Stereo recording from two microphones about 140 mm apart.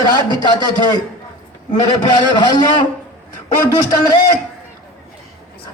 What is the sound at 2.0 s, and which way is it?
Speech, 30° left (ahead or behind).